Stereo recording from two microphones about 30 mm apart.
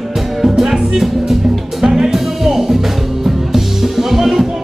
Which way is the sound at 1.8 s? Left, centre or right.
Right.